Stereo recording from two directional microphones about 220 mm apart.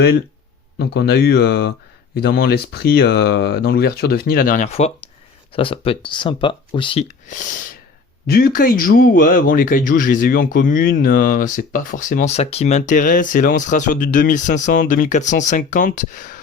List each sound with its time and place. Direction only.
0.8 s speech: 50° left (ahead or behind); by 7.0 s 20° left (ahead or behind)
8.3 s speech: 40° left (ahead or behind)